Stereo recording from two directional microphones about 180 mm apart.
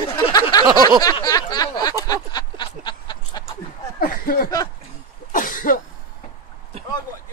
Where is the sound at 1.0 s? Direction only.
20° left (ahead or behind).